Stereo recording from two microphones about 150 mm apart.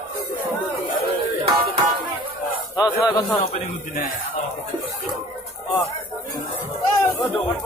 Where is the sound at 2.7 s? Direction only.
25° left (ahead or behind).